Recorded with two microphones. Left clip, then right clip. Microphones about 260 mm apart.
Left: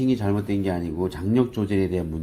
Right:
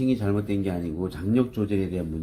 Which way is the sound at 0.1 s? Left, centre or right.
Left.